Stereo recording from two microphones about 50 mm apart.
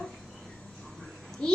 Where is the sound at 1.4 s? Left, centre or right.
Centre.